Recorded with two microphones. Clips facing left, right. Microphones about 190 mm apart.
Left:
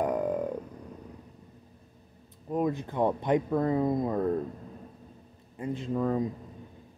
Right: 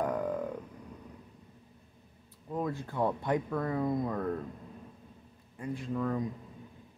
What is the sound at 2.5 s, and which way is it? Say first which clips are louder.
Speech: left 5 dB; 20° left (ahead or behind).